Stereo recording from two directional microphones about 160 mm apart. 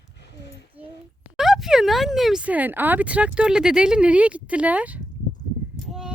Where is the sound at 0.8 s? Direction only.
10° right (ahead or behind).